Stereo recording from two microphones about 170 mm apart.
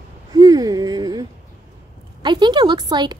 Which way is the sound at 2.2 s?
25° right (ahead or behind).